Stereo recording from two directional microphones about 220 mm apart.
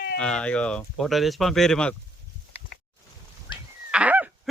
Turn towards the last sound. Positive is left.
turn(degrees=-5)  # may be behind; listen again after turning